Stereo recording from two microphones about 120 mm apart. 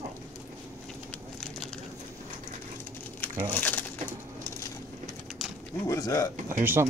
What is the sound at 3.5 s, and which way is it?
Speech, 15° left (ahead or behind).